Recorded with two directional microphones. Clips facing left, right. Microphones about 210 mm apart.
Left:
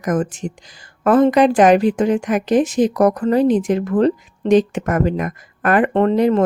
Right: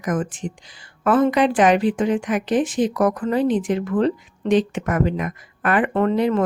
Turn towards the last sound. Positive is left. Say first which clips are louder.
# left 4 dB
turn(degrees=40)  # may be behind; listen again after turning